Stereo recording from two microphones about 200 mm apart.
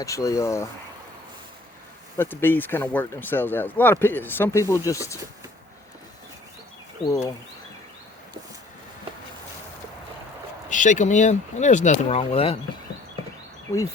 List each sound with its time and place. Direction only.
0.0 s speech: 15° left (ahead or behind)
2.1 s speech: 10° left (ahead or behind)
7.0 s speech: 15° left (ahead or behind)
10.7 s speech: 40° left (ahead or behind)